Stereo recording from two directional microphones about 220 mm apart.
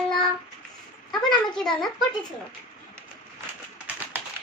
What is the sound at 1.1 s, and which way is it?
Child singing, centre (ahead or behind).